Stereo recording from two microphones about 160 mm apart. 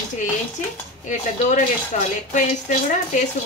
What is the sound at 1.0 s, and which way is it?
Speech, 50° left (ahead or behind).